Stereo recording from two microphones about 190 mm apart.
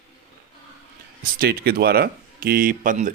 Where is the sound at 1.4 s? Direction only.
55° right (ahead or behind).